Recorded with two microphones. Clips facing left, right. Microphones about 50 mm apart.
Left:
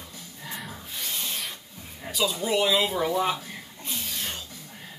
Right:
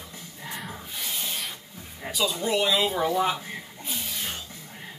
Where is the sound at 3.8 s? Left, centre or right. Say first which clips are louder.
Left 1 dB; centre.